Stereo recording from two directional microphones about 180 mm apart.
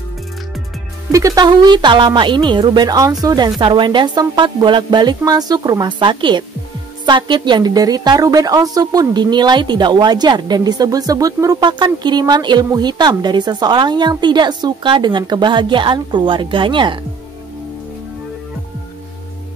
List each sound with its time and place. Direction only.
1.1 s a woman's voice: 20° right (ahead or behind)